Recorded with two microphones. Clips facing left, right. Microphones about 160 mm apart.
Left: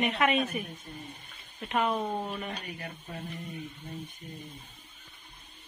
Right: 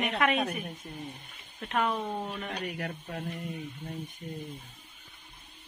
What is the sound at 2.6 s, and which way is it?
Speech, 80° right.